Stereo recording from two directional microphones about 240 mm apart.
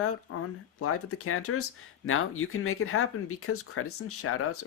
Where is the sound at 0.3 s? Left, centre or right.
Left.